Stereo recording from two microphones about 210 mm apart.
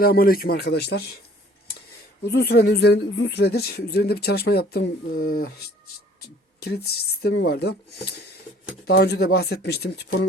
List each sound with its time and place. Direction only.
0.0 s speech: 45° left (ahead or behind)
2.2 s speech: 50° left (ahead or behind)